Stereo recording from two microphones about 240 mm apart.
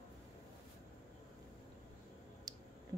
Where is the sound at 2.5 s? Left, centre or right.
Centre.